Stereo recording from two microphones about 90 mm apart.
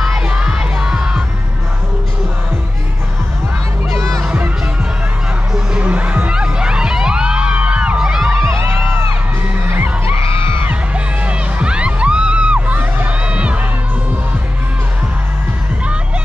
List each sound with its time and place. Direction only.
0.0 s crowd: 5° right (ahead or behind)
3.9 s music: 35° right (ahead or behind)
4.2 s music: 20° right (ahead or behind)
5.5 s music: 10° right (ahead or behind)
8.4 s music: 30° right (ahead or behind)
11.2 s music: 10° right (ahead or behind)